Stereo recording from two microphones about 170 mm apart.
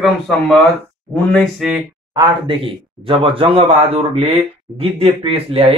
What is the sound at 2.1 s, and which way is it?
A man's voice, 30° right (ahead or behind).